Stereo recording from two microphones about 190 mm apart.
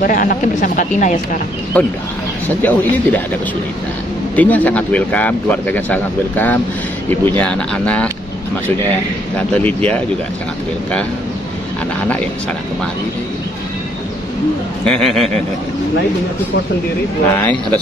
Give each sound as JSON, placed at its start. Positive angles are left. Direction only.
{"t": 0.0, "sound": "speech", "side_deg": 45}
{"t": 1.7, "sound": "speech", "side_deg": 10}
{"t": 4.4, "sound": "speech", "side_deg": 10}
{"t": 9.5, "sound": "speech", "side_deg": 10}
{"t": 14.9, "sound": "speech", "side_deg": 0}
{"t": 17.4, "sound": "speech", "side_deg": 10}